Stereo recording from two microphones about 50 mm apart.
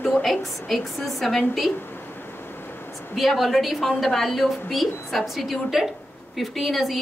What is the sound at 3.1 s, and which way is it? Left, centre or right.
A woman's voice, centre.